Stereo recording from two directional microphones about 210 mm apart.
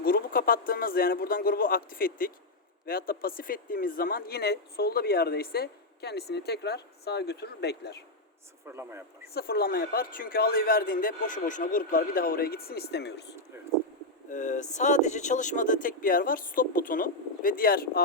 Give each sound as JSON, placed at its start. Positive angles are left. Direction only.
{"t": 0.0, "sound": "speech", "side_deg": 45}
{"t": 8.6, "sound": "a man's voice", "side_deg": -10}
{"t": 9.2, "sound": "speech", "side_deg": 45}
{"t": 14.3, "sound": "speech", "side_deg": 35}